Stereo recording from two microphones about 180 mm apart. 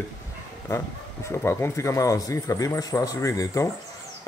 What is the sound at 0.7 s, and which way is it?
Speech, 15° left (ahead or behind).